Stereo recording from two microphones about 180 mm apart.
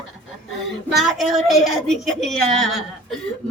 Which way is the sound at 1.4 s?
Centre (ahead or behind).